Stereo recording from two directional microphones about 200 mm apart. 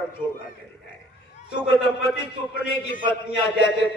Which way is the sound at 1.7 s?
55° left (ahead or behind).